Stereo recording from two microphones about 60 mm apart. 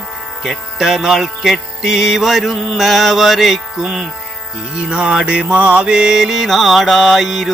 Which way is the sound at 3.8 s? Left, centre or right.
Centre.